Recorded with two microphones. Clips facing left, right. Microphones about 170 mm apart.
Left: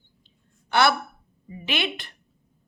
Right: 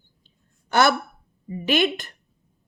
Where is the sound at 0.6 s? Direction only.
45° right (ahead or behind).